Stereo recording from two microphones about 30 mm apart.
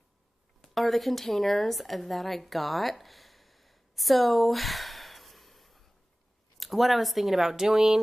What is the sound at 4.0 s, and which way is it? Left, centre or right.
Sigh, centre.